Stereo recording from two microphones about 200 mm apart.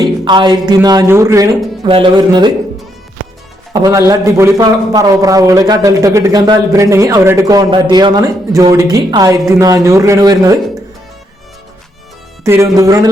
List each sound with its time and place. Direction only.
0.0 s speech: 20° right (ahead or behind)
3.7 s speech: 15° right (ahead or behind)
12.5 s speech: 15° right (ahead or behind)